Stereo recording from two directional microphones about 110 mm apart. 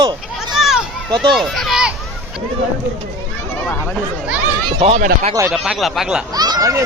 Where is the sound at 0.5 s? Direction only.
5° right (ahead or behind).